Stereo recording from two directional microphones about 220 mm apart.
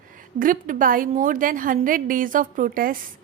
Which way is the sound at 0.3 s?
40° right (ahead or behind).